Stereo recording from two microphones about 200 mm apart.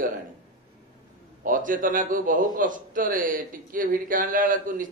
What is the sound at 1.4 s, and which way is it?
A man's voice, 40° right (ahead or behind).